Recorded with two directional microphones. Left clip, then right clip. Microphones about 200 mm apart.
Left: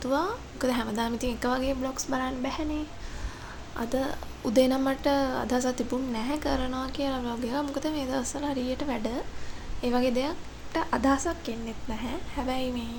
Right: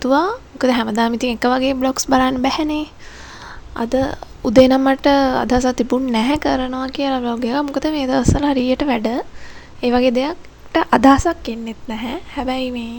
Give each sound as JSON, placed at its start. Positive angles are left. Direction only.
{"t": 0.0, "sound": "a woman's voice", "side_deg": -45}